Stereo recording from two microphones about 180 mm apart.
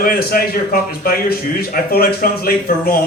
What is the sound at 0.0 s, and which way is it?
Speech, 55° left (ahead or behind).